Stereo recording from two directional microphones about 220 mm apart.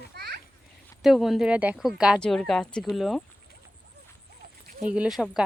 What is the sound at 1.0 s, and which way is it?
A woman's voice, centre (ahead or behind).